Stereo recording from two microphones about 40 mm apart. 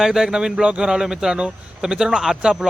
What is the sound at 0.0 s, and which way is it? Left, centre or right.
A man's voice, centre.